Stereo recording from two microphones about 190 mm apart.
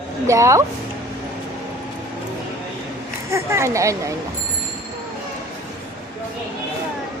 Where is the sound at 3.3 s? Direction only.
15° right (ahead or behind).